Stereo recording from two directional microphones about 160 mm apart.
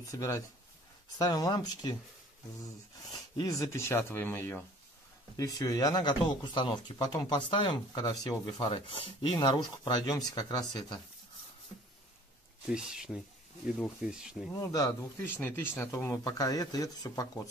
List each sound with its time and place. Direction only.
0.0 s speech: 20° left (ahead or behind)
3.0 s speech: 25° left (ahead or behind)
12.6 s speech: 5° right (ahead or behind)
14.5 s speech: 20° left (ahead or behind)